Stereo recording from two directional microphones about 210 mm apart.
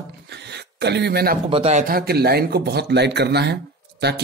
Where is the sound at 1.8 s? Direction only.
45° right (ahead or behind).